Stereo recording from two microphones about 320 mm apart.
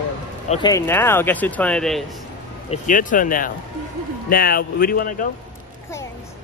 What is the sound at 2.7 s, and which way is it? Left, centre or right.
Speech, left.